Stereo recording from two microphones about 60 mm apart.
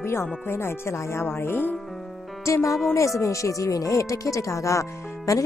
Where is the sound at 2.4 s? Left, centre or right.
Left.